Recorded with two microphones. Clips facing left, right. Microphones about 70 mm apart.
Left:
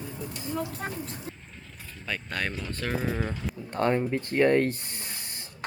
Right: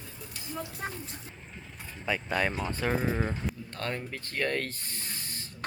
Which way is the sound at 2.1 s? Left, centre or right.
Centre.